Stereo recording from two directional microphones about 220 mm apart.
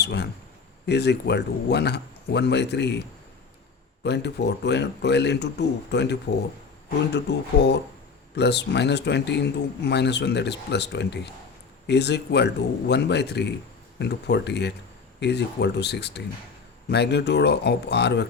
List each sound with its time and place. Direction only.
0.0 s speech: 50° left (ahead or behind)
4.0 s speech: 50° left (ahead or behind)